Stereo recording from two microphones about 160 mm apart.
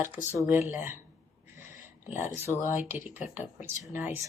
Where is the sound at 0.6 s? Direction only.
15° right (ahead or behind).